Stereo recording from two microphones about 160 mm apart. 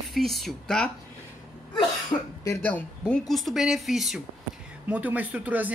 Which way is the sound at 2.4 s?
15° left (ahead or behind).